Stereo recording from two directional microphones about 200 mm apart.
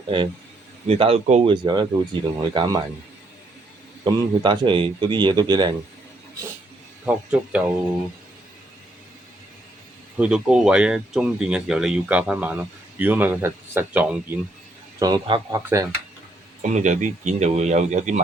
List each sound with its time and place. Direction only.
0.9 s speech: 30° right (ahead or behind)
4.0 s speech: 25° right (ahead or behind)
7.0 s speech: 5° right (ahead or behind)
10.2 s speech: 5° right (ahead or behind)
14.9 s speech: 20° right (ahead or behind)
16.6 s speech: 35° right (ahead or behind)